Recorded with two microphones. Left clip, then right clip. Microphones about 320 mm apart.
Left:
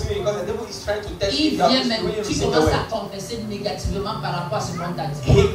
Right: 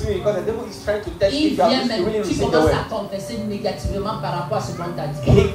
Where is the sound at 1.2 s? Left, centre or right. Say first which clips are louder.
Right 2 dB; centre.